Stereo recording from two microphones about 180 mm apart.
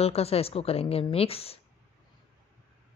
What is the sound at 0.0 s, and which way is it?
A woman's voice, 35° left (ahead or behind).